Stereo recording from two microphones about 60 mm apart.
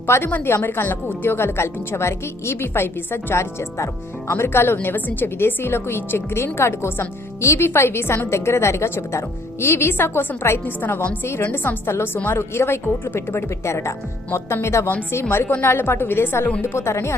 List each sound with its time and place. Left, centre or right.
0.1 s a woman's voice: left